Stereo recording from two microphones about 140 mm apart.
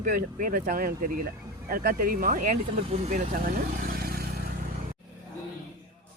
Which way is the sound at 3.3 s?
85° right.